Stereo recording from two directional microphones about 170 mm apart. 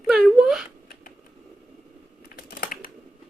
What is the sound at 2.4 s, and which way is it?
Typing, 65° left (ahead or behind).